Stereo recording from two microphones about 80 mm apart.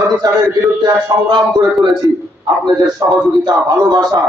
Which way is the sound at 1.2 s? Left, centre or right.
Right.